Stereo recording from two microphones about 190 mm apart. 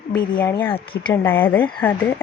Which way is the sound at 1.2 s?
10° left (ahead or behind).